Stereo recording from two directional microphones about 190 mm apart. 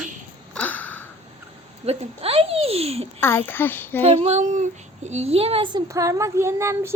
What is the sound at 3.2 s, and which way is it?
Speech, 10° left (ahead or behind).